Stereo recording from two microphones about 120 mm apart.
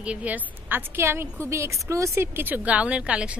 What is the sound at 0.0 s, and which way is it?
A woman's voice, 10° right (ahead or behind).